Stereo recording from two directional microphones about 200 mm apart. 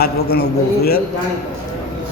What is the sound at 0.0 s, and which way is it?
Speech, 50° left (ahead or behind).